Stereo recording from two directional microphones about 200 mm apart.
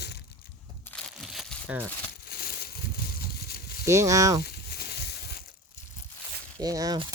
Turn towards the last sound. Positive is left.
turn(degrees=-20)  # may be behind; listen again after turning